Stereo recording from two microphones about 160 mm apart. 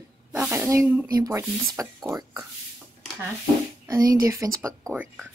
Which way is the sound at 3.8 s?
20° right (ahead or behind).